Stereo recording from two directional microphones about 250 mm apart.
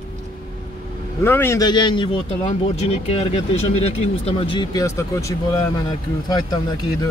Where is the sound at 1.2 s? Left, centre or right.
Centre.